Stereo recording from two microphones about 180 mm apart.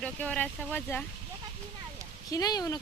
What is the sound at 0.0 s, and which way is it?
Speech, 5° left (ahead or behind).